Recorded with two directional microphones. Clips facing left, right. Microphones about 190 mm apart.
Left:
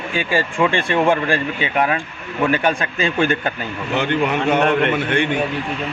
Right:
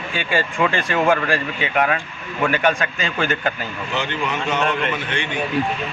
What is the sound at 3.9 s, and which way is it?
A man's voice, 55° left (ahead or behind).